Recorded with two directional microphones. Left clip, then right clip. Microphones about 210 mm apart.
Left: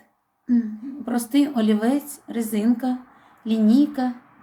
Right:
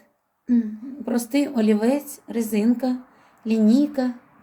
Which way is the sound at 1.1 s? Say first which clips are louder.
Left 1 dB; 20° right (ahead or behind).